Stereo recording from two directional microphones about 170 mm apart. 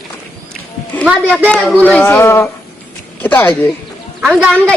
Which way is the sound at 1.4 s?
5° left (ahead or behind).